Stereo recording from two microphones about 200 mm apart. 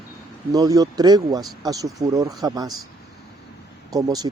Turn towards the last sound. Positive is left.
turn(degrees=-20)  # may be behind; listen again after turning